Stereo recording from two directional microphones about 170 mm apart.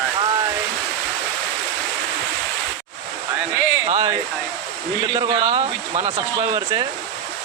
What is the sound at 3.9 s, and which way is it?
Speech, 40° right (ahead or behind).